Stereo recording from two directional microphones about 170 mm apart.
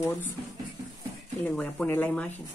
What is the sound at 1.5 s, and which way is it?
Speech, 5° left (ahead or behind).